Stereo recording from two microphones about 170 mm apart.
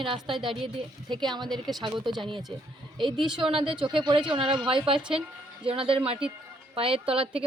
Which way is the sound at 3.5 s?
30° right (ahead or behind).